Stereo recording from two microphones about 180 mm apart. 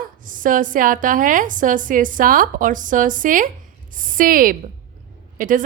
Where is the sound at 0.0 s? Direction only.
50° right (ahead or behind).